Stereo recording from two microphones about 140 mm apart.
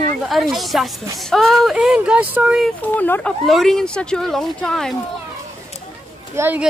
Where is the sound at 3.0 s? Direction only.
10° left (ahead or behind).